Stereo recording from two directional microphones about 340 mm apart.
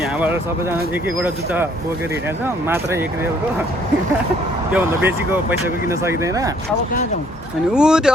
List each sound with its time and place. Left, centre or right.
0.2 s speech: centre
2.6 s speech: centre
4.7 s speech: centre
7.7 s speech: centre